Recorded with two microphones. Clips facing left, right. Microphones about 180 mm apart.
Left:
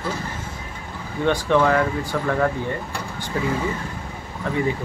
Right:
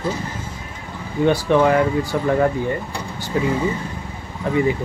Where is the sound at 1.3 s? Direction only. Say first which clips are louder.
Right 2 dB; 15° right (ahead or behind).